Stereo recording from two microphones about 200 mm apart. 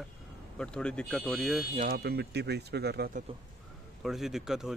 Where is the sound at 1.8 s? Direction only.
50° right (ahead or behind).